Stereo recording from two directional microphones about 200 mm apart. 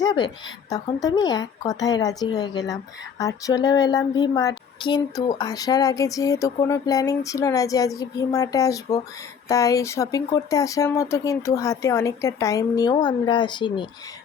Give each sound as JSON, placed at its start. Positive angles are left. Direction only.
{"t": 0.0, "sound": "a woman's voice", "side_deg": 20}